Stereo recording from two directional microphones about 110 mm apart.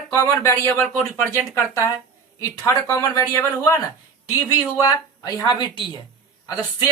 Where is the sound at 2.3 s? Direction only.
30° left (ahead or behind); by 6.0 s 45° left (ahead or behind).